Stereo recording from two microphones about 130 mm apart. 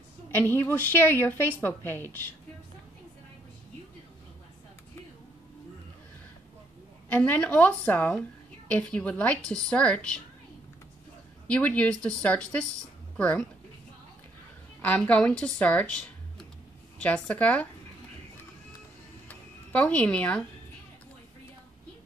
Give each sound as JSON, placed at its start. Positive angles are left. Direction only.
{"t": 0.3, "sound": "a woman's voice", "side_deg": 15}
{"t": 7.1, "sound": "a woman's voice", "side_deg": 15}
{"t": 11.4, "sound": "a woman's voice", "side_deg": 10}
{"t": 14.8, "sound": "a woman's voice", "side_deg": 10}
{"t": 19.2, "sound": "music", "side_deg": 10}